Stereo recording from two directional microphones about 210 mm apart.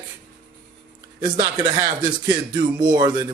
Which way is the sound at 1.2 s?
20° right (ahead or behind).